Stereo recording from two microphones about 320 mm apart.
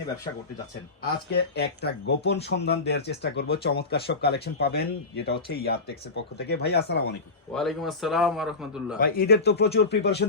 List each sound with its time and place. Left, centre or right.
1.4 s speech: left
7.5 s a man's voice: centre
9.0 s speech: left